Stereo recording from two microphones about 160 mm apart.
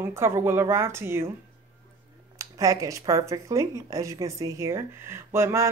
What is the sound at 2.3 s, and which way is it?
Speech, 20° right (ahead or behind).